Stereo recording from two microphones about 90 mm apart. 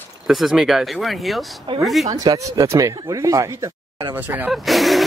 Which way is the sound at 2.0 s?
40° right (ahead or behind).